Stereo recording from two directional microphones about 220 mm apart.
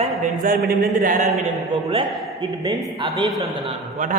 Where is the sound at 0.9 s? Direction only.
35° right (ahead or behind).